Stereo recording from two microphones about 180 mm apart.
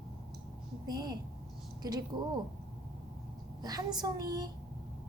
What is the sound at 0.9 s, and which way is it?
Speech, 20° right (ahead or behind).